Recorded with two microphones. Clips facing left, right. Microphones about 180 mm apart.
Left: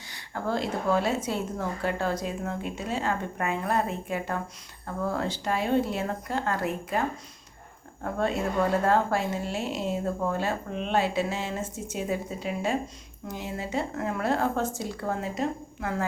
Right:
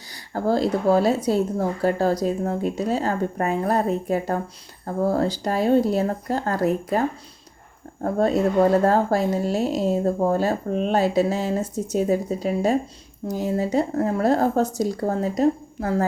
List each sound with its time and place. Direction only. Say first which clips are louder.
0.1 s speech: right 8 dB; 35° right (ahead or behind)
8.0 s speech: right 8 dB; 40° right (ahead or behind)